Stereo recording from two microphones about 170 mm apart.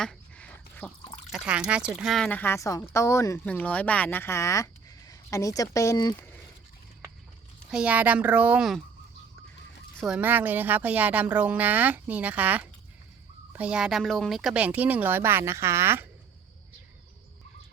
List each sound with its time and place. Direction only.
0.0 s a sound: 5° left (ahead or behind)
1.3 s speech: 5° right (ahead or behind); by 6.1 s 20° left (ahead or behind)
7.7 s speech: 5° right (ahead or behind)
10.0 s speech: 5° right (ahead or behind)